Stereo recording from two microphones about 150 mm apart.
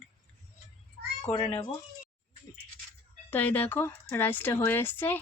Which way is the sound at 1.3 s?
35° left (ahead or behind).